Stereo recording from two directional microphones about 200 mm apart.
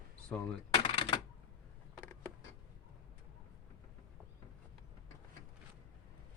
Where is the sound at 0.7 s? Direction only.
25° left (ahead or behind).